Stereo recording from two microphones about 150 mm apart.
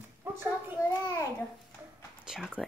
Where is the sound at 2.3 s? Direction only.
5° right (ahead or behind).